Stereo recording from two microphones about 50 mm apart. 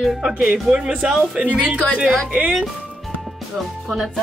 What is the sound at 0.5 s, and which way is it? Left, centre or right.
Speech, centre.